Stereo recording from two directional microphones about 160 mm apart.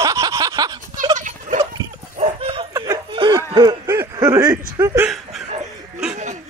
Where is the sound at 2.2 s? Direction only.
40° right (ahead or behind).